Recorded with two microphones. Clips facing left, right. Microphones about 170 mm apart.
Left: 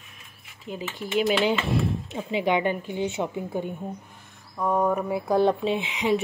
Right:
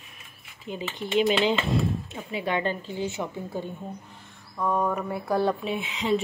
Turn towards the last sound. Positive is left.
turn(degrees=10)  # may be behind; listen again after turning